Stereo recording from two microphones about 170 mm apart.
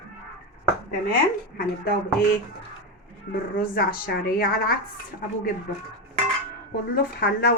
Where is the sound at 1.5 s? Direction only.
60° left (ahead or behind).